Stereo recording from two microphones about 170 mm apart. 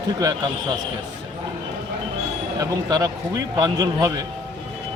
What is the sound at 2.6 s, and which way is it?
Speech, 20° right (ahead or behind).